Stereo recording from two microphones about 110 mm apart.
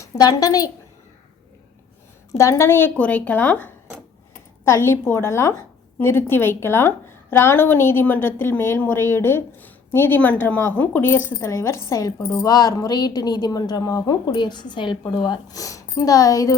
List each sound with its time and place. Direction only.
0.0 s a woman's voice: 35° left (ahead or behind)
2.4 s a woman's voice: 25° left (ahead or behind)